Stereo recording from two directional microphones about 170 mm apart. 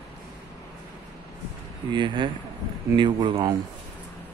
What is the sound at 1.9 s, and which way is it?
Speech, 30° right (ahead or behind).